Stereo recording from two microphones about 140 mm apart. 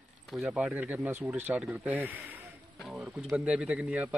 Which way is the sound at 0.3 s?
5° right (ahead or behind).